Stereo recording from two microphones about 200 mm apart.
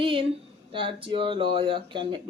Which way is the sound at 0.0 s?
25° right (ahead or behind).